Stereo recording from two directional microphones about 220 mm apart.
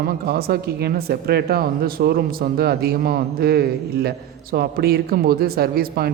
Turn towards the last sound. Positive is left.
turn(degrees=-45)  # may be behind; listen again after turning